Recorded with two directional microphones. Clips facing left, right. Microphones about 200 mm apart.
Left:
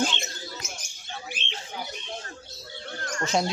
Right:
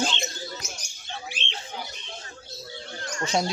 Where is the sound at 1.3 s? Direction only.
55° left (ahead or behind).